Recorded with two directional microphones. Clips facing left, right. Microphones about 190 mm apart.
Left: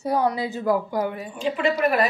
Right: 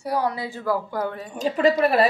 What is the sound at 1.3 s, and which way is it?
Speech, 40° right (ahead or behind).